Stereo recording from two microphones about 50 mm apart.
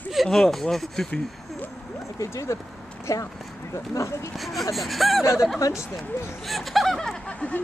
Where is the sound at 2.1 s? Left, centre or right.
Left.